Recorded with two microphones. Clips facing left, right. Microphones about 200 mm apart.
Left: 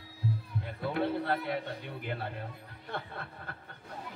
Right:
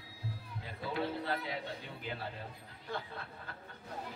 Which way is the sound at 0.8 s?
60° left (ahead or behind).